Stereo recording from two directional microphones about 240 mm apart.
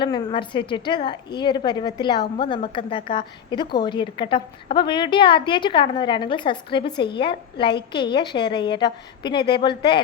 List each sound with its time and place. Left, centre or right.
0.0 s a woman's voice: left